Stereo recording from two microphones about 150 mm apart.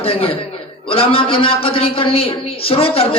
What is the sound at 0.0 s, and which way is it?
Speech, 40° left (ahead or behind).